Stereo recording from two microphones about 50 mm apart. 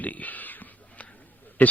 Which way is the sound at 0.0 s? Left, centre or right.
Left.